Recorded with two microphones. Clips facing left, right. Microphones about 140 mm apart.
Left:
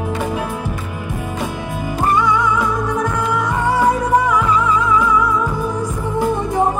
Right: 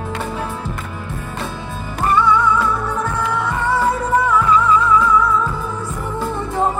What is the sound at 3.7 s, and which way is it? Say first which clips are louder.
Music: left 3 dB; 10° left (ahead or behind).